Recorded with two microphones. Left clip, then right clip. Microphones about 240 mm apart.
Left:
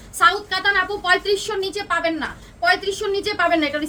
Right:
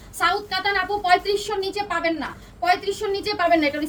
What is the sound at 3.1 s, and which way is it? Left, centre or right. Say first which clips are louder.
Speech: even; centre.